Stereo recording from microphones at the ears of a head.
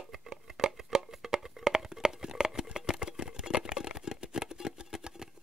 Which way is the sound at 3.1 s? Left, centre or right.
Left.